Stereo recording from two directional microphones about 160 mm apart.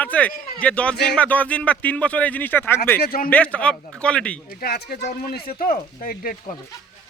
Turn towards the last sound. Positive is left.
turn(degrees=65)  # may be behind; listen again after turning